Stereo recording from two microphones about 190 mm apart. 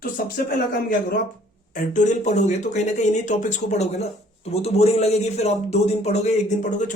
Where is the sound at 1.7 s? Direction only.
45° left (ahead or behind).